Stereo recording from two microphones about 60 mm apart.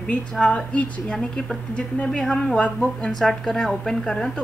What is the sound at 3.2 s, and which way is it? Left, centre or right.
A woman's voice, centre.